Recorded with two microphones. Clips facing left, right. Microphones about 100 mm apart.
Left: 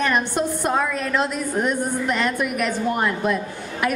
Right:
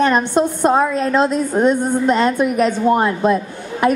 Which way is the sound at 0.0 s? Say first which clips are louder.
Right 6 dB; 25° right (ahead or behind).